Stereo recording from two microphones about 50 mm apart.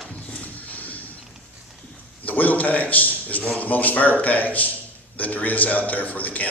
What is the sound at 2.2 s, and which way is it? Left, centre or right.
A man's voice, left.